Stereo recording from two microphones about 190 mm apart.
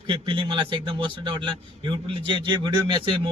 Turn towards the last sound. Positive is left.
turn(degrees=-25)  # may be behind; listen again after turning